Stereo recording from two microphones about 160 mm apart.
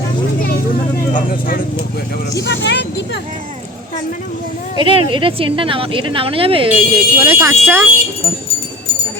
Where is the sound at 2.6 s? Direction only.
90° left.